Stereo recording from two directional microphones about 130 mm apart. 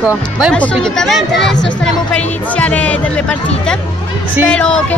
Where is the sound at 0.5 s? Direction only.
5° left (ahead or behind).